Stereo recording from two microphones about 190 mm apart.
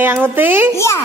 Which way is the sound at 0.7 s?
15° left (ahead or behind).